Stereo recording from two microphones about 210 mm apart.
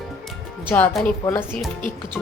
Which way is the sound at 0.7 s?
10° left (ahead or behind).